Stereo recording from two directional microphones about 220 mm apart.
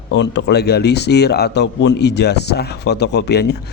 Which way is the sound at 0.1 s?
50° left (ahead or behind).